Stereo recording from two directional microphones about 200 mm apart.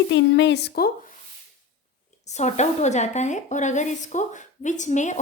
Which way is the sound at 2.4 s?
35° left (ahead or behind).